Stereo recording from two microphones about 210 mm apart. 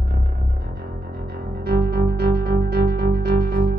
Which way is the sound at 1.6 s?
50° right (ahead or behind).